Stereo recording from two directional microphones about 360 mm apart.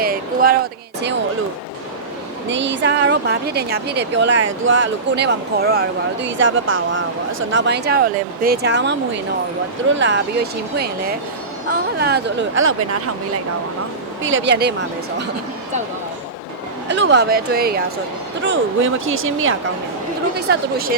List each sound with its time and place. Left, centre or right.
0.0 s a sound: right
2.5 s a woman's voice: right
10.0 s a woman's voice: right
14.2 s speech: right
16.9 s a woman's voice: right